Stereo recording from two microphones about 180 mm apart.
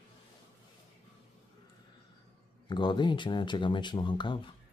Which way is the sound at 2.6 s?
25° left (ahead or behind).